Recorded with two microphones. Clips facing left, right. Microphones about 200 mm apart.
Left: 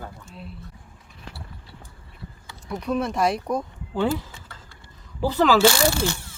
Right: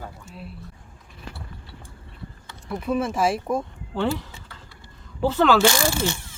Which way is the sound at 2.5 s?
Centre (ahead or behind).